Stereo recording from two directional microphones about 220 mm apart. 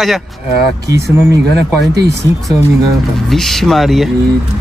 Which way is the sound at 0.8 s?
15° right (ahead or behind).